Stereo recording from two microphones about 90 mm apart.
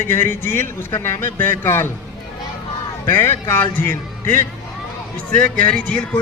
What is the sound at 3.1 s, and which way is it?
A man's voice, 25° left (ahead or behind).